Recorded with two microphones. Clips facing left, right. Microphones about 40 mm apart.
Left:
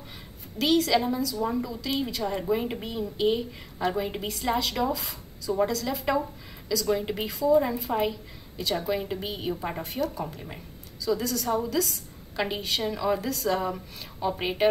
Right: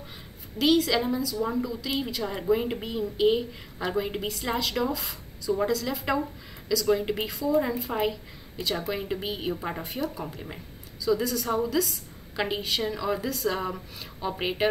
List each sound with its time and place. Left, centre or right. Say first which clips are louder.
0.6 s a woman's voice: even; centre